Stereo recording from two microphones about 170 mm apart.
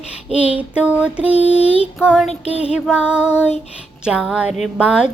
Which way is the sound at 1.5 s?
35° left (ahead or behind).